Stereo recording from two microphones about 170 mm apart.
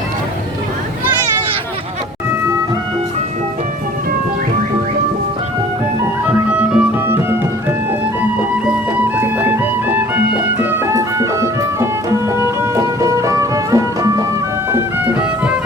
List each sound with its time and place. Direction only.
6.5 s music: 5° right (ahead or behind)
14.7 s music: 10° right (ahead or behind)